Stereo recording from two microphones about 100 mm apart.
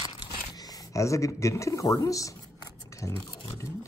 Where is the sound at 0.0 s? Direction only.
45° left (ahead or behind).